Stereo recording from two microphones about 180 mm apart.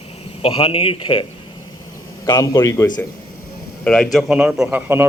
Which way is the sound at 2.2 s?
20° left (ahead or behind).